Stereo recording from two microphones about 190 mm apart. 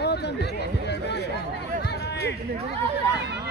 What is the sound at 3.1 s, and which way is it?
Speech, 60° right (ahead or behind).